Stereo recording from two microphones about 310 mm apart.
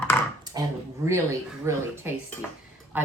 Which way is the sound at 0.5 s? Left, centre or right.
Centre.